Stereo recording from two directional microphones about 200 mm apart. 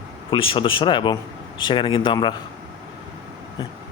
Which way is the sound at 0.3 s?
25° left (ahead or behind).